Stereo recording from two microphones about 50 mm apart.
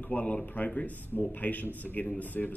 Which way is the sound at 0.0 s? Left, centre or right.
Left.